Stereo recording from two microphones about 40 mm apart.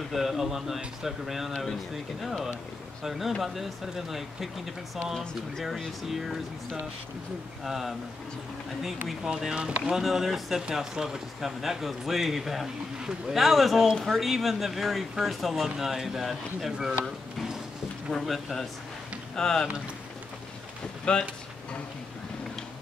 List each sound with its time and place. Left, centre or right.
0.1 s speech: centre
5.6 s speech: centre
7.6 s speech: centre
9.3 s speech: centre
9.6 s speech: right
9.9 s speech: centre
18.1 s speech: centre
19.3 s speech: centre
21.0 s speech: left